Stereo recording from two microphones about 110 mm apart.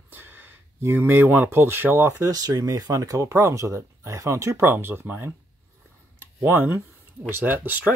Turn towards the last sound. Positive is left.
turn(degrees=-15)  # may be behind; listen again after turning